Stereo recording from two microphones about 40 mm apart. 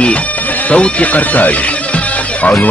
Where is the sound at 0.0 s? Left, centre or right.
Left.